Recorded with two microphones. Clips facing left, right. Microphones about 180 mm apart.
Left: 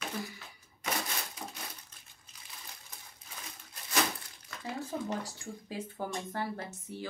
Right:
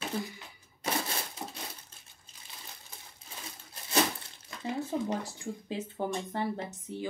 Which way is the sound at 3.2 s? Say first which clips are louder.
Right 3 dB; 30° right (ahead or behind).